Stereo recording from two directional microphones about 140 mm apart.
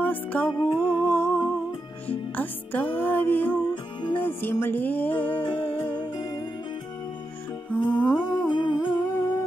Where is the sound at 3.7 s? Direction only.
35° left (ahead or behind).